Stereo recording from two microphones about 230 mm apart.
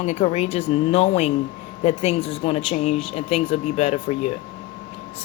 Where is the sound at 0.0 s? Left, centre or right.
Left.